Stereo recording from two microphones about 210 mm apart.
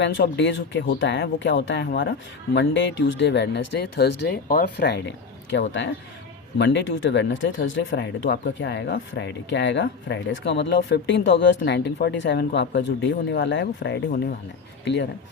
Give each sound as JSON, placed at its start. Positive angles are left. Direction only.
{"t": 0.0, "sound": "speech", "side_deg": 55}